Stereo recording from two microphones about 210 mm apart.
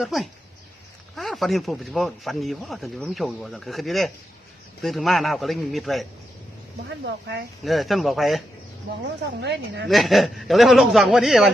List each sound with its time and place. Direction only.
0.0 s speech: centre (ahead or behind)
7.0 s speech: 55° right (ahead or behind)
7.6 s speech: centre (ahead or behind)
9.4 s speech: 55° right (ahead or behind)
9.9 s speech: centre (ahead or behind)